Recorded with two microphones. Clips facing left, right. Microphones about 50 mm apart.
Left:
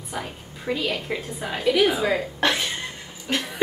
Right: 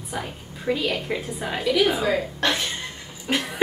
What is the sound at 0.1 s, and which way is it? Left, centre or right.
A woman's voice, centre.